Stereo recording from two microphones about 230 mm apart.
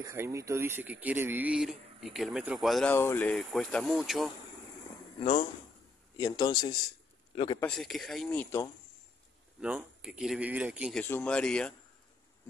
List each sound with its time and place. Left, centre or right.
0.0 s speech: centre
5.2 s speech: left
7.6 s speech: centre
9.6 s speech: centre